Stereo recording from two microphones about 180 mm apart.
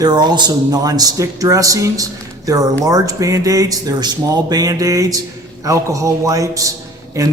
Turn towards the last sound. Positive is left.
turn(degrees=-20)  # may be behind; listen again after turning